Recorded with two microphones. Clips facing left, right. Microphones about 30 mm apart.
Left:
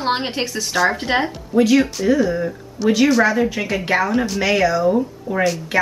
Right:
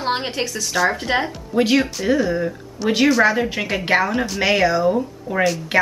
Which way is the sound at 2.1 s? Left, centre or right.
Centre.